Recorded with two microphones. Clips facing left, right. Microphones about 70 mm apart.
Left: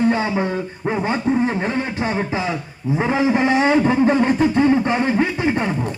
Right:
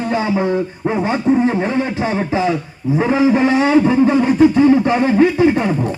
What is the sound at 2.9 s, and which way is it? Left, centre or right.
Speech, centre.